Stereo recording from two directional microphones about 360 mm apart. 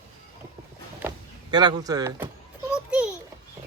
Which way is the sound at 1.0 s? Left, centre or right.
Centre.